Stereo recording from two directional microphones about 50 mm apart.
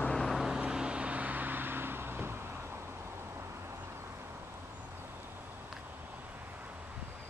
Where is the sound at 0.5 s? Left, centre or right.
Centre; by 2.3 s right.